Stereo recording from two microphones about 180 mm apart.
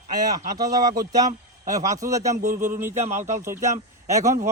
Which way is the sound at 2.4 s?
45° right (ahead or behind).